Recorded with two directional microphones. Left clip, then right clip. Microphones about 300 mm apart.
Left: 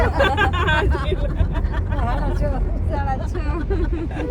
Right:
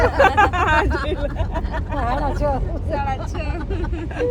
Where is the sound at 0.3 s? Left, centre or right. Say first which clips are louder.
Right 4 dB; centre.